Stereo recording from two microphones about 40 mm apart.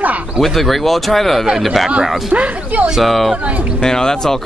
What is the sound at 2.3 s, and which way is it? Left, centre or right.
Speech, right.